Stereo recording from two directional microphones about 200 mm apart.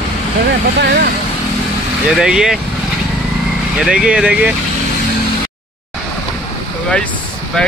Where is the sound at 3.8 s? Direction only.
5° right (ahead or behind).